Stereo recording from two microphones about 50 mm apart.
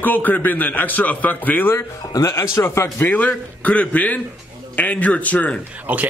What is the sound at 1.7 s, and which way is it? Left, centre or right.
Speech, left.